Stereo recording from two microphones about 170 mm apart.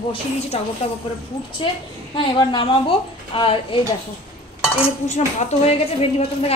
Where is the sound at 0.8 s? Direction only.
35° left (ahead or behind).